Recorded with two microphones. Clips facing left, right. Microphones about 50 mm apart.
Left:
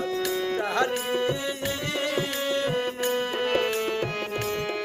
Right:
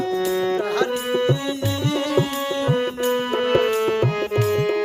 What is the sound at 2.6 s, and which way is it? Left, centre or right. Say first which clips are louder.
Music: right 5 dB; right.